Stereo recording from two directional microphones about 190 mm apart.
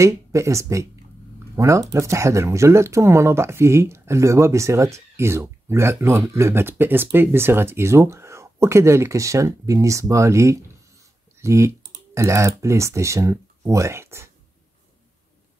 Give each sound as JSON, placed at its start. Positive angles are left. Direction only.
{"t": 0.0, "sound": "speech", "side_deg": -15}